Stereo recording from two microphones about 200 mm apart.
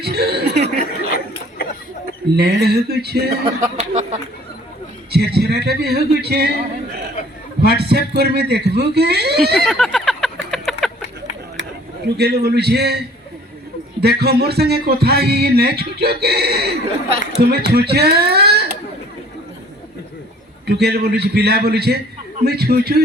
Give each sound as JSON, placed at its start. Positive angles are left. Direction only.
{"t": 0.0, "sound": "chuckle", "side_deg": -50}
{"t": 0.8, "sound": "chuckle", "side_deg": 50}
{"t": 2.3, "sound": "speech", "side_deg": -55}
{"t": 3.4, "sound": "a sound", "side_deg": -35}
{"t": 5.1, "sound": "speech", "side_deg": -50}
{"t": 7.6, "sound": "speech", "side_deg": -55}
{"t": 9.6, "sound": "a sound", "side_deg": 0}
{"t": 12.0, "sound": "speech", "side_deg": -55}
{"t": 14.0, "sound": "speech", "side_deg": -50}
{"t": 20.7, "sound": "speech", "side_deg": -55}